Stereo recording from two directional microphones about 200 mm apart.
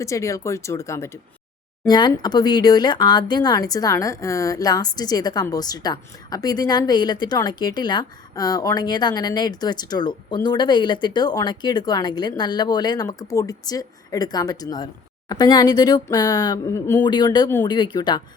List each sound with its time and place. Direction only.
0.0 s speech: 15° left (ahead or behind)